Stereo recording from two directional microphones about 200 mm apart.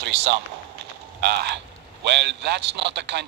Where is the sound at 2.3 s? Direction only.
60° right (ahead or behind).